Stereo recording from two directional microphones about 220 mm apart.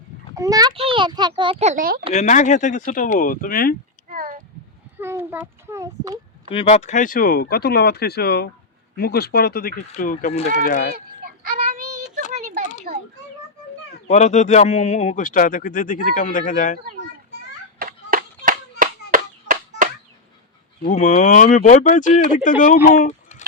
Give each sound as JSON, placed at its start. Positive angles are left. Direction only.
{"t": 0.3, "sound": "a child's voice", "side_deg": -15}
{"t": 2.1, "sound": "speech", "side_deg": 35}
{"t": 4.1, "sound": "a sound", "side_deg": -40}
{"t": 4.9, "sound": "a child's voice", "side_deg": -10}
{"t": 6.5, "sound": "speech", "side_deg": 25}
{"t": 11.7, "sound": "child singing", "side_deg": -40}
{"t": 14.1, "sound": "speech", "side_deg": 30}
{"t": 17.7, "sound": "a sound", "side_deg": -40}
{"t": 20.8, "sound": "speech", "side_deg": 35}
{"t": 22.9, "sound": "a sound", "side_deg": 35}